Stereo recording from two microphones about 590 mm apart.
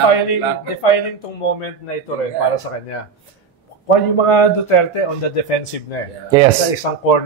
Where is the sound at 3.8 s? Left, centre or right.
Left.